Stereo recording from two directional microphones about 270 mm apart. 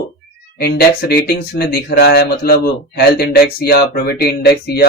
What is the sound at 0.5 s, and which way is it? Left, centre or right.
Speech, left.